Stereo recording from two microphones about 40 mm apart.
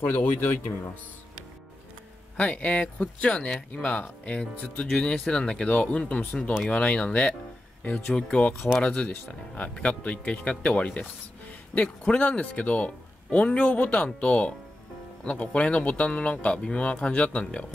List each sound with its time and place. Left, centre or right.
0.0 s speech: left
2.3 s a man's voice: left
7.9 s speech: centre
8.3 s a man's voice: left
8.8 s a man's voice: left
13.9 s a man's voice: left